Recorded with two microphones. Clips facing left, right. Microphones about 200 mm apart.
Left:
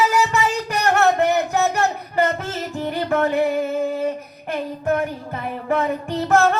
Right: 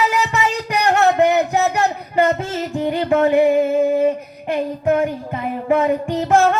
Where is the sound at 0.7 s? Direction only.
15° right (ahead or behind).